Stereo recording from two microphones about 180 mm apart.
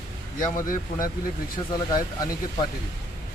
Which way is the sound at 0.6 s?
50° left (ahead or behind).